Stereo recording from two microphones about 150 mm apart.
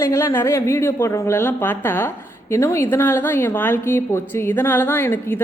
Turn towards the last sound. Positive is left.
turn(degrees=15)  # may be behind; listen again after turning